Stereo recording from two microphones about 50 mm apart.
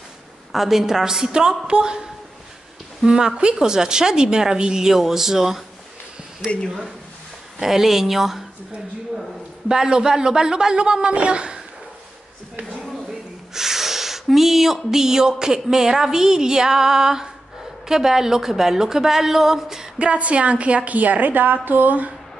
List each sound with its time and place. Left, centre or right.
0.5 s a woman's voice: centre
3.1 s a woman's voice: centre
7.6 s speech: centre
9.7 s a woman's voice: centre
13.5 s a woman's voice: centre
20.0 s a woman's voice: right